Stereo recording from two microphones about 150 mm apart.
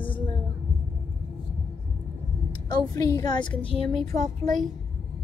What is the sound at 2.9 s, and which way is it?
A woman's voice, 20° left (ahead or behind).